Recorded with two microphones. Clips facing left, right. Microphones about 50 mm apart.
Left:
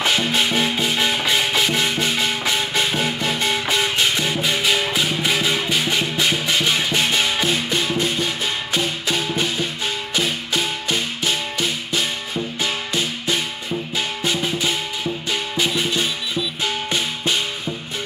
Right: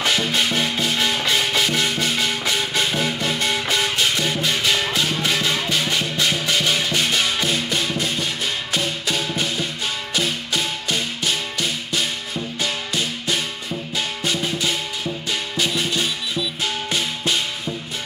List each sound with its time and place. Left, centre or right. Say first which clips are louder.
0.0 s music: left 1 dB; centre
2.9 s music: left 1 dB; centre
3.2 s music: left 1 dB; centre
12.6 s music: even; left